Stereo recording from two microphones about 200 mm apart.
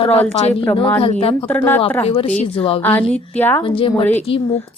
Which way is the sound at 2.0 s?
30° left (ahead or behind).